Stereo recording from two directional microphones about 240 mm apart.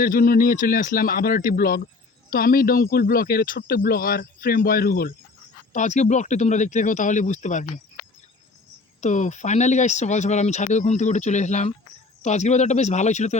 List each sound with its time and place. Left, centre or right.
0.0 s speech: left
9.0 s speech: left